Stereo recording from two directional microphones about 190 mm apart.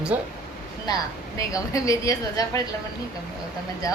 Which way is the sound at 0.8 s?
20° left (ahead or behind).